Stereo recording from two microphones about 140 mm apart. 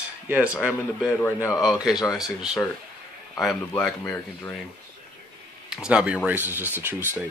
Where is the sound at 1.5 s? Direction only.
5° right (ahead or behind).